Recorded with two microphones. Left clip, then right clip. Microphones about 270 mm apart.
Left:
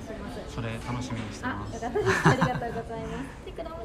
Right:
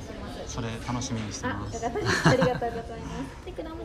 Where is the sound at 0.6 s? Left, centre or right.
Centre.